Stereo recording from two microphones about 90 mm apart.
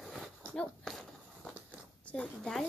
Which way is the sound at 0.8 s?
5° left (ahead or behind).